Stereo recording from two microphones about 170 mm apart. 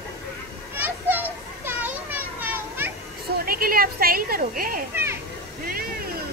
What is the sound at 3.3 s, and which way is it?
A woman's voice, 60° right (ahead or behind).